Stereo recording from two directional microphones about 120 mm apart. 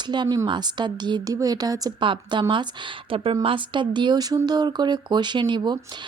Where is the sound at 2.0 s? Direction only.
40° right (ahead or behind).